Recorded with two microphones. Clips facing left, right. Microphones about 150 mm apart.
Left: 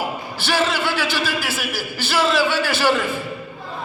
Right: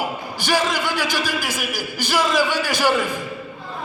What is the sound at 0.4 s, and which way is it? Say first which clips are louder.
Speech: even; 15° right (ahead or behind).